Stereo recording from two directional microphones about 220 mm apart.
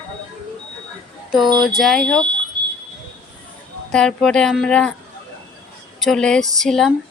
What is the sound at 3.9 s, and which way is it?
Speech, 5° left (ahead or behind).